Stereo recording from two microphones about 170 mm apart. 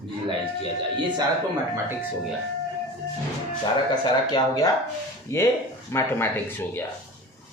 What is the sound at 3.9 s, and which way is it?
Speech, 25° left (ahead or behind).